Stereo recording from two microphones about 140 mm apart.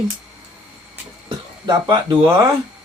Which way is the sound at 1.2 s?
30° right (ahead or behind).